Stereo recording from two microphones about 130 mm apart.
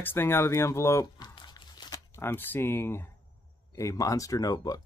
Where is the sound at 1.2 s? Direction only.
35° left (ahead or behind).